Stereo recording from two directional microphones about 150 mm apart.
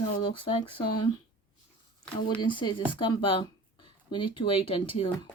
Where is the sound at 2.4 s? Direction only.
30° left (ahead or behind).